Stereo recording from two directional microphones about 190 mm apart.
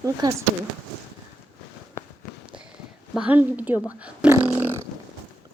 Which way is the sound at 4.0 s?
10° right (ahead or behind).